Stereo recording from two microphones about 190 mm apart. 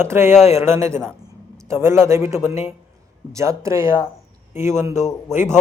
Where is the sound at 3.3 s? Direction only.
15° right (ahead or behind).